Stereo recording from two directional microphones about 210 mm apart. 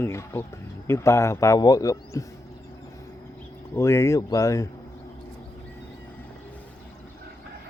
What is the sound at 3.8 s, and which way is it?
Speech, 15° left (ahead or behind).